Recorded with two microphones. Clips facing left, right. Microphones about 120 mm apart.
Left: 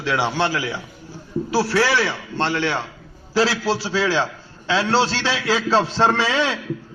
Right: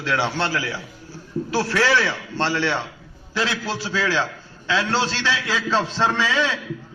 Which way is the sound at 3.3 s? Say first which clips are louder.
Left 6 dB; 30° left (ahead or behind).